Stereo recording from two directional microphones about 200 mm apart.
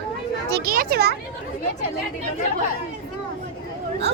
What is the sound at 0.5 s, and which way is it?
Speech, 45° right (ahead or behind).